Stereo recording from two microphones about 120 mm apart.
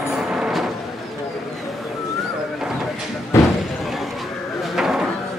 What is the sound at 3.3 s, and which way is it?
Slam, 20° left (ahead or behind).